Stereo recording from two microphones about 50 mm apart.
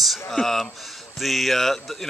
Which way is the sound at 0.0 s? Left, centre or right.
Centre.